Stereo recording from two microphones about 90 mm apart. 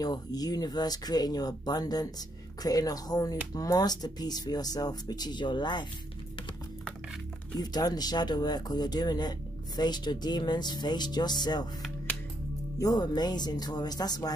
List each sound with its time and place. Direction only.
0.0 s speech: 45° left (ahead or behind)
7.5 s speech: 45° left (ahead or behind)
12.7 s speech: 45° left (ahead or behind)